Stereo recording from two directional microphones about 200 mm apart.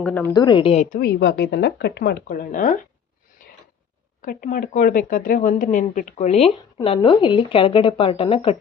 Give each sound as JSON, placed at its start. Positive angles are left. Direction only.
{"t": 0.0, "sound": "a woman's voice", "side_deg": 10}
{"t": 0.3, "sound": "a woman's voice", "side_deg": 20}
{"t": 2.2, "sound": "speech", "side_deg": 45}
{"t": 4.2, "sound": "speech", "side_deg": 45}